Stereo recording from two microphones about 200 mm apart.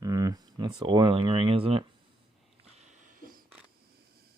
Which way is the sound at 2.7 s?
40° right (ahead or behind).